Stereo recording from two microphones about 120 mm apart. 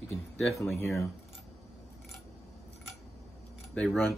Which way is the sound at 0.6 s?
25° left (ahead or behind).